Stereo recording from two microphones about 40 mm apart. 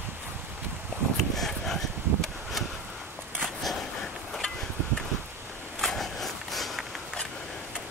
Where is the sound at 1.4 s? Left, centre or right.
Centre.